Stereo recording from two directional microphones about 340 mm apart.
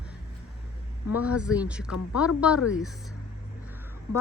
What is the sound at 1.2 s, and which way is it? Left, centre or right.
Speech, centre.